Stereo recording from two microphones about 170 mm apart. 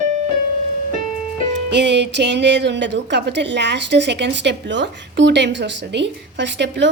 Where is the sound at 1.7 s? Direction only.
90° right.